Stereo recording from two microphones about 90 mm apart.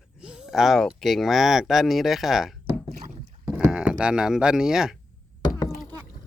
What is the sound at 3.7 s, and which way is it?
Cattle, 10° right (ahead or behind).